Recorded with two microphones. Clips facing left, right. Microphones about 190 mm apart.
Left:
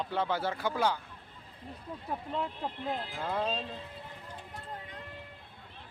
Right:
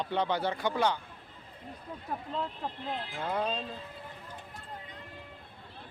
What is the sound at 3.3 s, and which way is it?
Speech, 10° right (ahead or behind).